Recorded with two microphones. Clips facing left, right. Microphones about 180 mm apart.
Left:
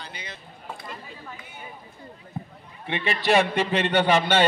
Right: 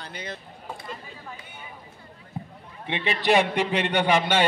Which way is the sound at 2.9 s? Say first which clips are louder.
Even; 20° right (ahead or behind).